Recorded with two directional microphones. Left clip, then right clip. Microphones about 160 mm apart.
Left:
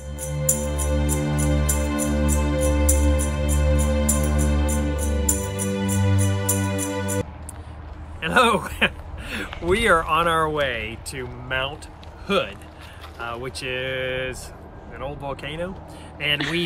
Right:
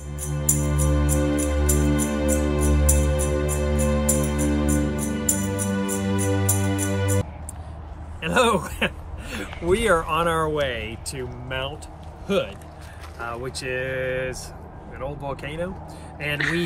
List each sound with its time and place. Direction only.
0.2 s music: centre (ahead or behind)
8.2 s a sound: 10° left (ahead or behind)
9.9 s speech: 5° left (ahead or behind)
13.2 s speech: 5° left (ahead or behind)